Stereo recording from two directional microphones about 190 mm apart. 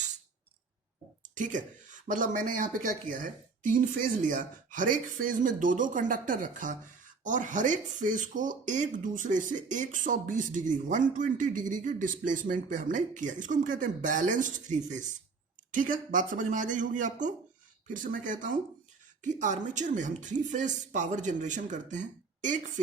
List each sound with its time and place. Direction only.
1.4 s a woman's voice: 40° right (ahead or behind)